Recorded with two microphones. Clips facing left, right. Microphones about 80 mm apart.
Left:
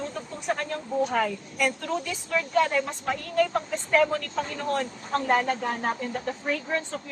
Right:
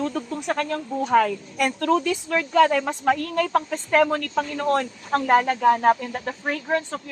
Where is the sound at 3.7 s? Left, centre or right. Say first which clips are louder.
Right 1 dB; right.